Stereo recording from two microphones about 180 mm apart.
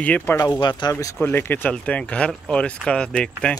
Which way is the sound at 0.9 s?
15° left (ahead or behind).